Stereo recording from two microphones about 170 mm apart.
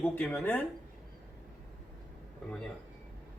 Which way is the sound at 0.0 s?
5° left (ahead or behind).